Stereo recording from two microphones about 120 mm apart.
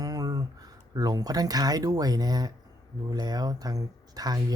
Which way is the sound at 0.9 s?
30° right (ahead or behind).